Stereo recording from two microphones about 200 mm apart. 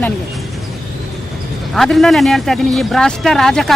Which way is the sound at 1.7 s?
Centre (ahead or behind).